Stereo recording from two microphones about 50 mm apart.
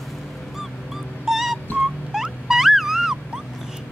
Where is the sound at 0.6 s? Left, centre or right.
Centre.